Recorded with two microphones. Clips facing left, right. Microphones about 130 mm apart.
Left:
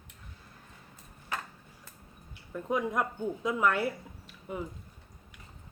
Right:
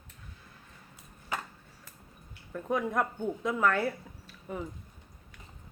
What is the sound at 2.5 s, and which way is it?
Speech, 15° left (ahead or behind).